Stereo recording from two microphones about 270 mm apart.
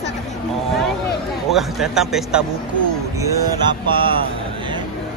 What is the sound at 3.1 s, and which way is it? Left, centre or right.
Vehicle, centre.